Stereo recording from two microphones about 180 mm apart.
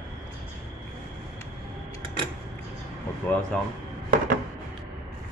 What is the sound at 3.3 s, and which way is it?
Speech, 5° left (ahead or behind).